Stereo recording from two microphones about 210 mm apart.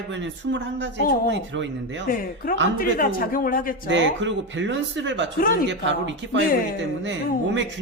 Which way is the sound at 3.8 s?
60° right (ahead or behind).